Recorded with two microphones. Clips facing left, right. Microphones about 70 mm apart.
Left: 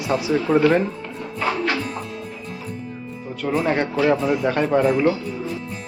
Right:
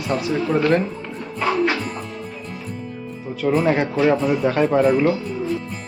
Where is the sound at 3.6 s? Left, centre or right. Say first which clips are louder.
Left 1 dB; centre.